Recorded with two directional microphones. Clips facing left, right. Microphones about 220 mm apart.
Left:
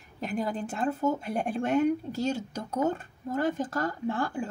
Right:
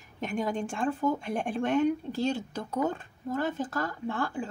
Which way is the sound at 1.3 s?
40° left (ahead or behind).